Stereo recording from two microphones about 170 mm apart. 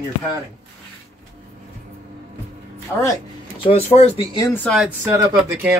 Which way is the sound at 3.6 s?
35° left (ahead or behind).